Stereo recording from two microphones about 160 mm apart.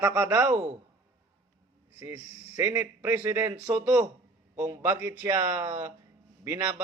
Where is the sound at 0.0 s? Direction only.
15° right (ahead or behind).